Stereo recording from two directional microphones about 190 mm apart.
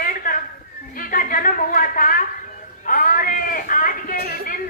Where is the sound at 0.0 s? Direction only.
45° left (ahead or behind).